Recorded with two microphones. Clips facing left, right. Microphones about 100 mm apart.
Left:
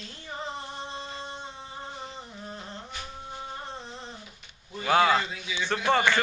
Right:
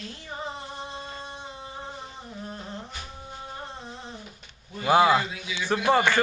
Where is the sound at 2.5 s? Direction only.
Centre (ahead or behind).